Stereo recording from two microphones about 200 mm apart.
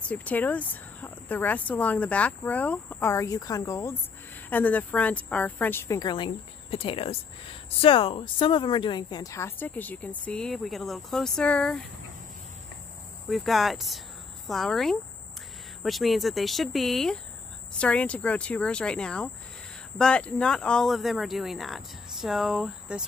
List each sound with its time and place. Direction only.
0.1 s speech: 5° left (ahead or behind)
13.3 s speech: centre (ahead or behind)